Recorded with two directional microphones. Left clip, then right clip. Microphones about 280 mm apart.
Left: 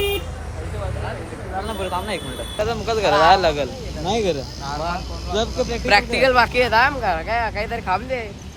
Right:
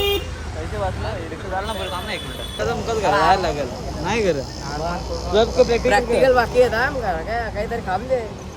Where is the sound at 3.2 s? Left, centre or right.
Left.